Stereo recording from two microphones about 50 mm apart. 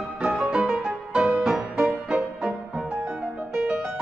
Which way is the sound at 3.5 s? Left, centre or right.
Centre.